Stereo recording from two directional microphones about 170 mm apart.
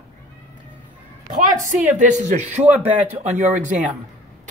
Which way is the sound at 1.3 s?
50° right (ahead or behind).